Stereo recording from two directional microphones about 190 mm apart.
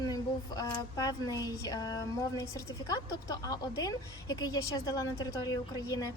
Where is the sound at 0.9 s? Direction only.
20° left (ahead or behind).